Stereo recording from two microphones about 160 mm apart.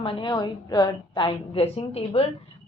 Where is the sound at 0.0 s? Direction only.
30° left (ahead or behind).